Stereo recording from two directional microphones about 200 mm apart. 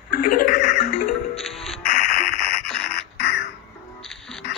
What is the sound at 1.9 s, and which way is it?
Music, 40° left (ahead or behind).